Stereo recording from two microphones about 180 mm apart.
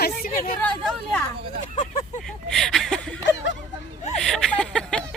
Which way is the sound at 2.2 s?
Centre (ahead or behind).